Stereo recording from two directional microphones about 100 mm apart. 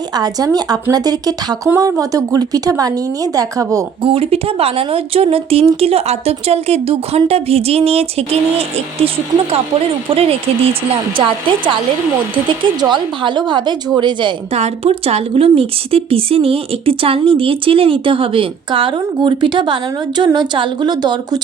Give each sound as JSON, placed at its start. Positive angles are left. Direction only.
{"t": 0.1, "sound": "a woman's voice", "side_deg": -40}
{"t": 4.0, "sound": "speech", "side_deg": -75}
{"t": 10.1, "sound": "speech", "side_deg": -75}
{"t": 11.2, "sound": "speech", "side_deg": -55}
{"t": 14.5, "sound": "a woman's voice", "side_deg": -90}